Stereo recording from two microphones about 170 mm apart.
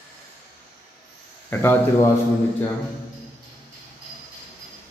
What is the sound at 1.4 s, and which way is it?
Speech, 10° left (ahead or behind).